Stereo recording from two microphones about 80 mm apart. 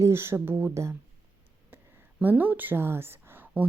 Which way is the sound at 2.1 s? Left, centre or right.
Centre.